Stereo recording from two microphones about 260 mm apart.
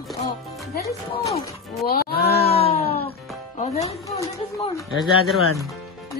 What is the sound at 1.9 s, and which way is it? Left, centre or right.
Speech, left.